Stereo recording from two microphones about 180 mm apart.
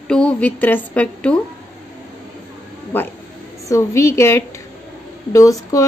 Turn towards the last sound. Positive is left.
turn(degrees=20)  # may be behind; listen again after turning